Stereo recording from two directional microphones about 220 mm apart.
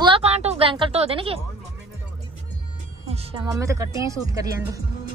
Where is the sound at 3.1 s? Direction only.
20° right (ahead or behind).